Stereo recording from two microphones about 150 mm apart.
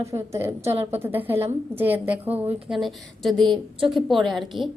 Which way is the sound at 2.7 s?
Centre (ahead or behind).